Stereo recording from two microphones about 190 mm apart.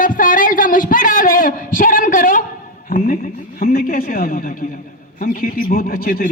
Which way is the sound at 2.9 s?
50° left (ahead or behind).